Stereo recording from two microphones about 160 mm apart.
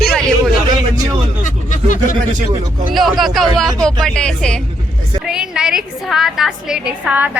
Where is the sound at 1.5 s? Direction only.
50° left (ahead or behind).